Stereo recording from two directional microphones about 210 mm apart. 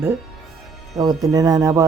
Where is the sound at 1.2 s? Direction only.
15° right (ahead or behind).